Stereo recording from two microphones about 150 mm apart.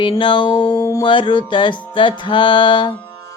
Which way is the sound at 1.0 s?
35° left (ahead or behind).